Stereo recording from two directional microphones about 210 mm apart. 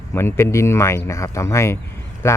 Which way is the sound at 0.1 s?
10° left (ahead or behind).